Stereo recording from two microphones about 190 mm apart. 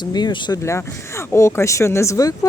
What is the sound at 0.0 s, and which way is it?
Speech, 25° left (ahead or behind).